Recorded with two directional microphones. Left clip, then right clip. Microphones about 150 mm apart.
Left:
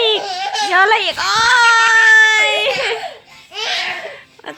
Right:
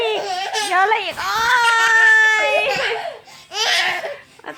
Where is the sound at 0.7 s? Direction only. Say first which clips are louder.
Left 5 dB; 20° left (ahead or behind).